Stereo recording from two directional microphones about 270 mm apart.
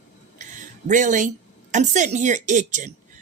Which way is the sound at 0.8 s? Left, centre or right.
Right.